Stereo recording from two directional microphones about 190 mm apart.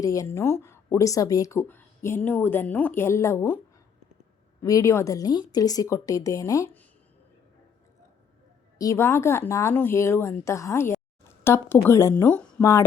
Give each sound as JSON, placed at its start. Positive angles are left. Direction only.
{"t": 0.0, "sound": "speech", "side_deg": 15}
{"t": 4.6, "sound": "speech", "side_deg": 15}
{"t": 8.8, "sound": "speech", "side_deg": 15}